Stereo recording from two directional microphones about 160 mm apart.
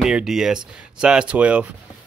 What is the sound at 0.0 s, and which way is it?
Speech, 5° right (ahead or behind).